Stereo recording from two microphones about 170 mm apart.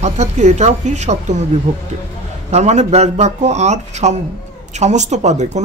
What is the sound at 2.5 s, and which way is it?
A woman's voice, 40° right (ahead or behind).